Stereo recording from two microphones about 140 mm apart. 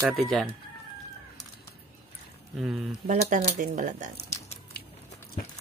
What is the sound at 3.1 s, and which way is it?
Speech, 60° right (ahead or behind).